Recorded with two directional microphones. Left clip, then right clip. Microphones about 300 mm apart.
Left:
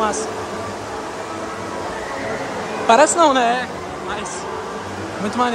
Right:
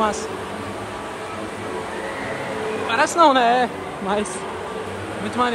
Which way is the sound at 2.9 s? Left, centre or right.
Centre.